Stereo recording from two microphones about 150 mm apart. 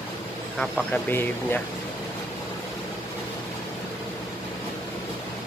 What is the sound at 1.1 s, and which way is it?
Speech, 15° left (ahead or behind).